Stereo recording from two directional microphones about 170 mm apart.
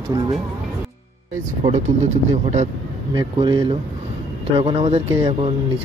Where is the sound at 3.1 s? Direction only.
30° right (ahead or behind).